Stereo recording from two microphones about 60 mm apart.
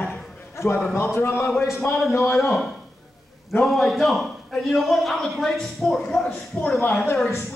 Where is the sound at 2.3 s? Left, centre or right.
Centre.